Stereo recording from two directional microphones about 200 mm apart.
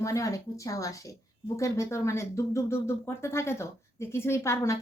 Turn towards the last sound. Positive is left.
turn(degrees=15)  # may be behind; listen again after turning